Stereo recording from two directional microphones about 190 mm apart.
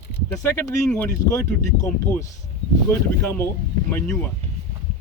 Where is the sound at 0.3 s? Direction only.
15° left (ahead or behind).